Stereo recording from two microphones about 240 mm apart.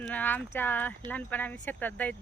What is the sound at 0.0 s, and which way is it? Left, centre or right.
Speech, centre.